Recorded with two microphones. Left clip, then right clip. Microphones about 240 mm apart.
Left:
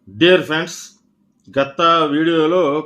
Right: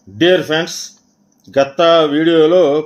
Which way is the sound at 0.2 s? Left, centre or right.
Centre.